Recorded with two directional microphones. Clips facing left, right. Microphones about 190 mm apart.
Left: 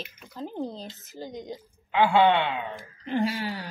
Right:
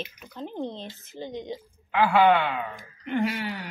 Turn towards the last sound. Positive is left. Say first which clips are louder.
# even
turn(degrees=30)  # may be behind; listen again after turning